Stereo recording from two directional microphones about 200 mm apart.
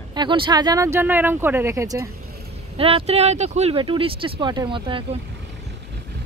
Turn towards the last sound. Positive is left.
turn(degrees=-25)  # may be behind; listen again after turning